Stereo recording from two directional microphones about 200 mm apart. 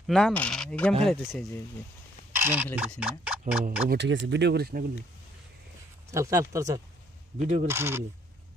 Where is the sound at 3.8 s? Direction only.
60° right (ahead or behind).